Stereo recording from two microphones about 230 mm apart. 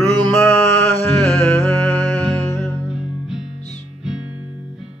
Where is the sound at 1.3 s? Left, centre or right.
Centre.